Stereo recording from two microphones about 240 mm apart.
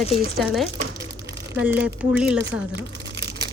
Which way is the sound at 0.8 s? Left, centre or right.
Right.